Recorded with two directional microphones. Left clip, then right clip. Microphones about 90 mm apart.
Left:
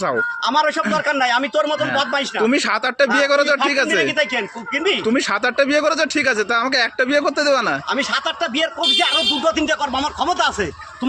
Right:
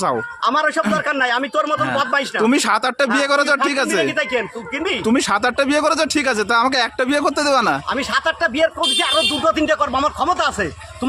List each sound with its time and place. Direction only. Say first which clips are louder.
0.0 s speech: even; 35° right (ahead or behind)
2.4 s speech: right 1 dB; 50° right (ahead or behind)
3.9 s speech: left 1 dB; 25° right (ahead or behind)
5.0 s speech: right 1 dB; 40° right (ahead or behind)
7.9 s speech: right 1 dB; 30° right (ahead or behind)